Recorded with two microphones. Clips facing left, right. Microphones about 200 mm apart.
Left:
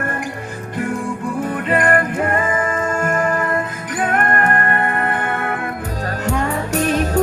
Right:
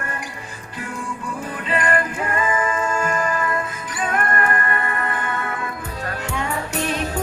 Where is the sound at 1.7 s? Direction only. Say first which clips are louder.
Left 4 dB; 55° left (ahead or behind).